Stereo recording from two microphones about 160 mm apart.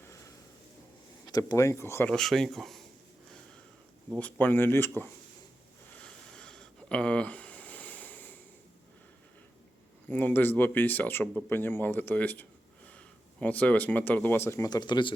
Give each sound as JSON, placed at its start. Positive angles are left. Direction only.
{"t": 0.0, "sound": "a sound", "side_deg": 20}
{"t": 1.3, "sound": "speech", "side_deg": 20}
{"t": 2.1, "sound": "speech", "side_deg": 5}
{"t": 4.2, "sound": "speech", "side_deg": 10}
{"t": 5.9, "sound": "a sound", "side_deg": 5}
{"t": 10.1, "sound": "speech", "side_deg": 10}